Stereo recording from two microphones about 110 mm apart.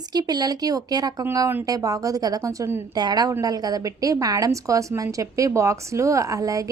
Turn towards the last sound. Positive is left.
turn(degrees=-30)  # may be behind; listen again after turning